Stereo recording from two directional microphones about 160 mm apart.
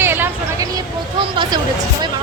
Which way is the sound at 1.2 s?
30° right (ahead or behind).